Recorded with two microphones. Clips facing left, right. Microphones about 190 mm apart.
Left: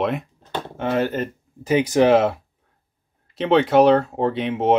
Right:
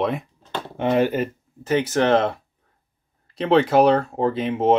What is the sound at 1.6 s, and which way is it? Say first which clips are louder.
Speech: left 3 dB; 15° left (ahead or behind).